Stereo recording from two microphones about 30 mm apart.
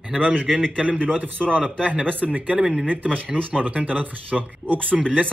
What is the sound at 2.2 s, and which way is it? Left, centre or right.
Speech, right.